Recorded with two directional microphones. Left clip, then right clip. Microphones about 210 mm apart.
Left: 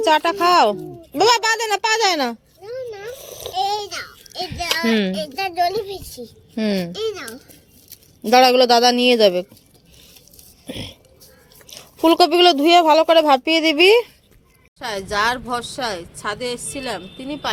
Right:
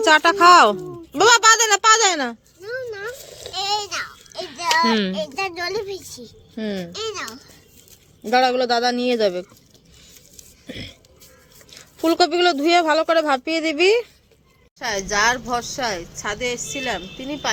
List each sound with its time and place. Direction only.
0.0 s speech: 5° right (ahead or behind); by 2.4 s 10° left (ahead or behind)
2.6 s a sound: 45° right (ahead or behind)
3.5 s a sound: 30° right (ahead or behind)
4.9 s speech: centre (ahead or behind)
5.1 s a woman's voice: 15° right (ahead or behind)
6.6 s a woman's voice: 20° left (ahead or behind)
6.9 s a child's voice: 30° right (ahead or behind)
8.2 s a woman's voice: 20° left (ahead or behind)
10.7 s a woman's voice: 5° left (ahead or behind)